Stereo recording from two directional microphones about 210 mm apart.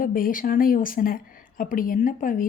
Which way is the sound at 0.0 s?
40° left (ahead or behind).